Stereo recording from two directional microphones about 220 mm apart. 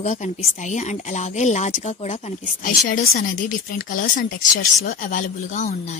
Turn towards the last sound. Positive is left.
turn(degrees=35)  # may be behind; listen again after turning